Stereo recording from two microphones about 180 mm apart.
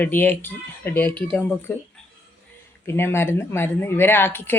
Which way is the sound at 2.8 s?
15° left (ahead or behind).